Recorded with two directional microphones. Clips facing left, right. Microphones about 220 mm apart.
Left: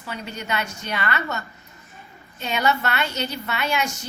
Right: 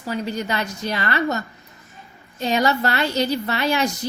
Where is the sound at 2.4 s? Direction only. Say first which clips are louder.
Right 4 dB; 35° right (ahead or behind).